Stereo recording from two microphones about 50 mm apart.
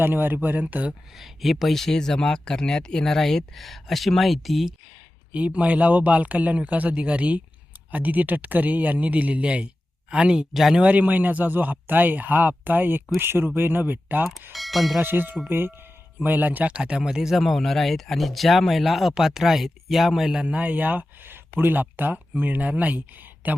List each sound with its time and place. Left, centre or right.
0.0 s speech: right
1.1 s speech: centre
5.3 s speech: right
10.5 s speech: centre
10.8 s speech: right
14.5 s speech: centre
15.0 s speech: right
16.2 s speech: right
16.6 s speech: right; by 20.4 s centre
20.4 s speech: right
20.7 s speech: right